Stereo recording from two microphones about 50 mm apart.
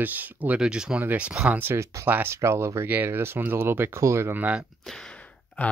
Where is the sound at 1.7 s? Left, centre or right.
Right.